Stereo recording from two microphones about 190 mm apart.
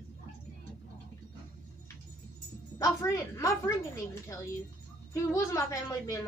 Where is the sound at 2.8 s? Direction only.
15° left (ahead or behind).